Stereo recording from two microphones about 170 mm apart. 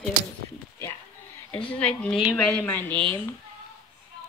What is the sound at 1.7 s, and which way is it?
A woman's voice, 5° left (ahead or behind).